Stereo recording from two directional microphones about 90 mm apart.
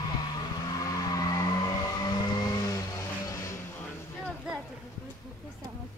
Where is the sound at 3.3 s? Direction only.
40° left (ahead or behind).